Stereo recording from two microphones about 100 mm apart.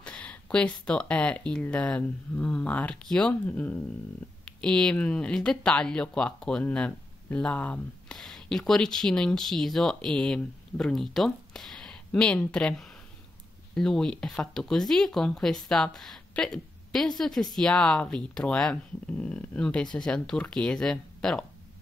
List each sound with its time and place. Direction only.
0.0 s speech: 15° left (ahead or behind)